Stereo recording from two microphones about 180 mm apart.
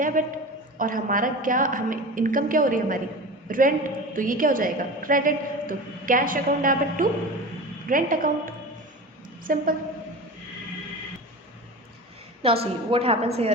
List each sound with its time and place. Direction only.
0.0 s a woman's voice: 45° right (ahead or behind)
12.4 s a woman's voice: 30° right (ahead or behind)